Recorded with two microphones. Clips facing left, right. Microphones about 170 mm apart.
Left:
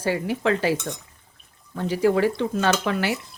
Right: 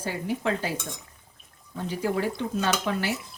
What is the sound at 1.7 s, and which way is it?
Speech, 90° left.